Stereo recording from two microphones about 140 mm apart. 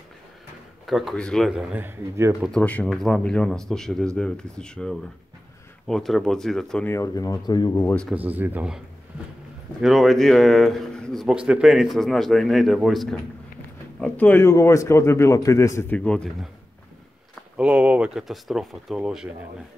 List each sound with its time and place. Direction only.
0.8 s speech: centre (ahead or behind); by 2.3 s 20° right (ahead or behind)
2.4 s speech: 5° left (ahead or behind)
6.9 s a man's voice: 25° left (ahead or behind)
7.8 s speech: 10° left (ahead or behind)
8.1 s speech: 10° right (ahead or behind)
14.0 s a man's voice: 10° left (ahead or behind)
16.0 s speech: 5° left (ahead or behind)
17.6 s speech: 10° right (ahead or behind)